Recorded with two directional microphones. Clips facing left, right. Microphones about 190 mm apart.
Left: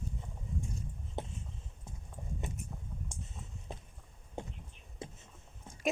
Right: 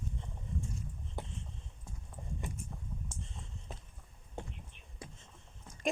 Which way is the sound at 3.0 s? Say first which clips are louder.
Even; 15° left (ahead or behind).